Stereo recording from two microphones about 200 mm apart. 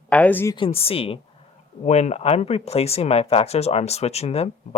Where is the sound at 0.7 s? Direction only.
30° left (ahead or behind).